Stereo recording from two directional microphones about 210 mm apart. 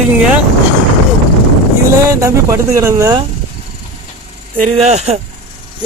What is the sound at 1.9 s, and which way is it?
A man's voice, 15° right (ahead or behind).